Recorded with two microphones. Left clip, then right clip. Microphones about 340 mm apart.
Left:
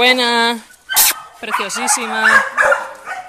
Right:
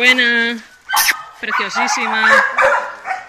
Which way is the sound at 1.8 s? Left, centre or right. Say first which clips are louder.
Right 4 dB; centre.